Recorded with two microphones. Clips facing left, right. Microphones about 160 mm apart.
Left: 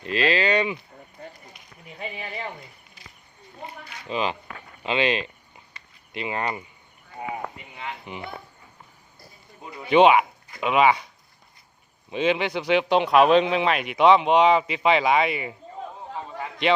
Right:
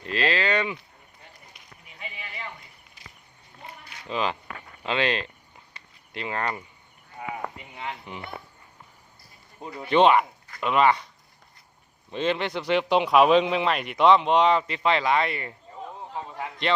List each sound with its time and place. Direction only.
0.1 s speech: 10° left (ahead or behind)
2.0 s a sound: 40° left (ahead or behind)
4.1 s speech: 5° left (ahead or behind)
4.8 s a sound: 5° left (ahead or behind)
6.1 s speech: 10° left (ahead or behind)
7.8 s speech: 5° left (ahead or behind)
9.9 s speech: 5° left (ahead or behind)
12.1 s speech: 5° left (ahead or behind)